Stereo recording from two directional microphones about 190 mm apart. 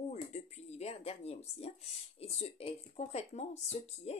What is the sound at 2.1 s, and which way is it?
Speech, 30° left (ahead or behind).